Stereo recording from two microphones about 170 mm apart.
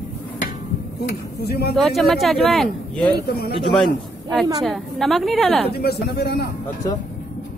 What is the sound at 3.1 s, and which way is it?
Speech, 65° left (ahead or behind).